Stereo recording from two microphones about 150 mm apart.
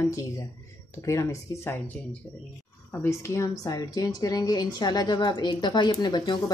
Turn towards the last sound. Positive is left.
turn(degrees=30)  # may be behind; listen again after turning